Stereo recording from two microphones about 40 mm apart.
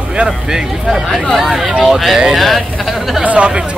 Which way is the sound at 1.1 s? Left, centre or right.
Centre.